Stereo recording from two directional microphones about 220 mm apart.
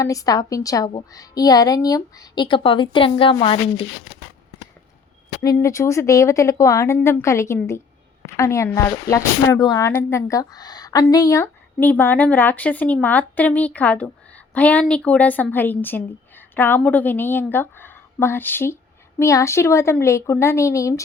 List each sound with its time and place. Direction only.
0.0 s speech: 15° left (ahead or behind)
5.4 s speech: 15° left (ahead or behind)